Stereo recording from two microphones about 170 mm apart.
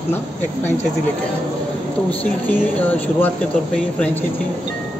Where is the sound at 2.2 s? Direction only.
10° left (ahead or behind).